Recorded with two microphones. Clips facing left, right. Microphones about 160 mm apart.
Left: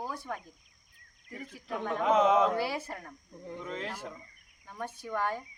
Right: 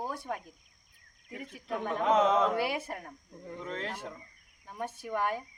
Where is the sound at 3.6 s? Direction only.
5° left (ahead or behind).